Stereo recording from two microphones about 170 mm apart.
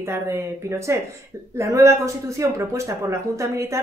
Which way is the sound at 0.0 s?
15° right (ahead or behind).